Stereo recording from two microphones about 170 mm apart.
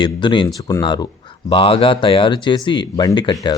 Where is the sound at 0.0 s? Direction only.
25° left (ahead or behind).